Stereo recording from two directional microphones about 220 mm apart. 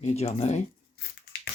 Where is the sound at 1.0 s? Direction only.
45° left (ahead or behind).